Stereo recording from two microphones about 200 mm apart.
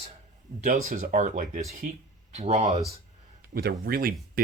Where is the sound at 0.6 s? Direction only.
45° right (ahead or behind).